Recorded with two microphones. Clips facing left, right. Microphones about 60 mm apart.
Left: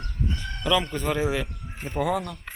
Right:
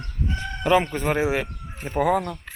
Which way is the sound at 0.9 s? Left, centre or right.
Right.